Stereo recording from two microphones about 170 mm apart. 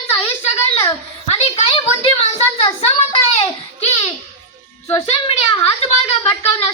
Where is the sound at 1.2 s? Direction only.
40° left (ahead or behind).